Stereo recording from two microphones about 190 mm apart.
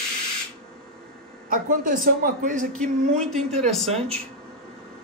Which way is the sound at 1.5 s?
45° right (ahead or behind).